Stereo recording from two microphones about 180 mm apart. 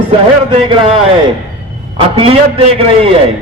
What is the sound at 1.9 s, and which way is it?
A man's voice, 30° right (ahead or behind).